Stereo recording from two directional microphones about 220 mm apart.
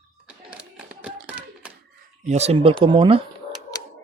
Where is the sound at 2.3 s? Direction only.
30° right (ahead or behind).